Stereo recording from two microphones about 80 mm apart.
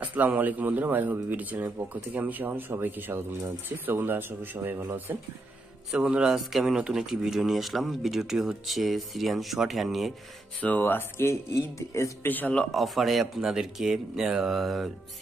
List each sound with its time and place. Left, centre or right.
0.0 s speech: centre
5.9 s speech: centre
10.6 s speech: left
12.3 s speech: left
12.5 s speech: centre